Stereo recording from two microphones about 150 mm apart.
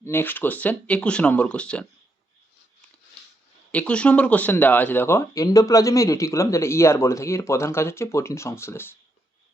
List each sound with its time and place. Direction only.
0.0 s speech: 15° left (ahead or behind)
3.7 s speech: 10° left (ahead or behind)